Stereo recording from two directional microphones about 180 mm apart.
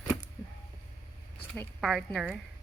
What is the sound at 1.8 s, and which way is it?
Speech, centre (ahead or behind).